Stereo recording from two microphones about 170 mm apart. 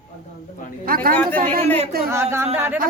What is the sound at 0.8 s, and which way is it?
Speech, 60° right (ahead or behind).